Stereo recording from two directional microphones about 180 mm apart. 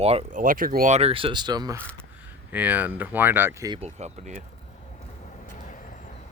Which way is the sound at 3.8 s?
40° right (ahead or behind).